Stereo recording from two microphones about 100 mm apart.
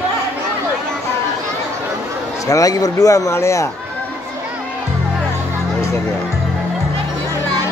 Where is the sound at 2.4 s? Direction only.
35° left (ahead or behind).